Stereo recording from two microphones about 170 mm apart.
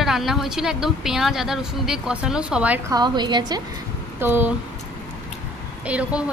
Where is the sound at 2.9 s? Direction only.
25° right (ahead or behind).